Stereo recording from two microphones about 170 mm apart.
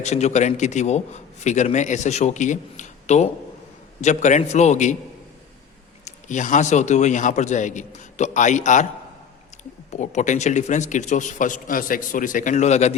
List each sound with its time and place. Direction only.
0.0 s a man's voice: 40° left (ahead or behind)
6.1 s a man's voice: 45° left (ahead or behind)
9.9 s a man's voice: 45° left (ahead or behind)